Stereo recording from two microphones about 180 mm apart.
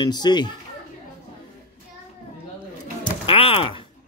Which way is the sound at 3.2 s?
30° left (ahead or behind).